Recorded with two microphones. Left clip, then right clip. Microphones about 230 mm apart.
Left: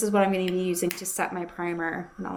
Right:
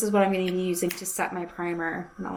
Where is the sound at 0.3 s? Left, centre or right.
Left.